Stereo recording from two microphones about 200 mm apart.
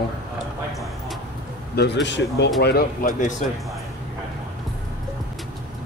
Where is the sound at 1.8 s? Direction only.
60° left (ahead or behind); by 3.4 s 40° left (ahead or behind).